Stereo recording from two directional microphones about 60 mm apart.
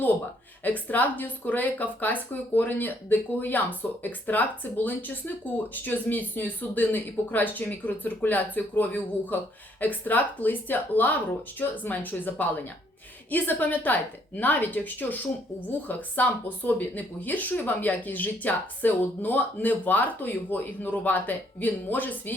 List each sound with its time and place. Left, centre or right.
0.6 s speech: left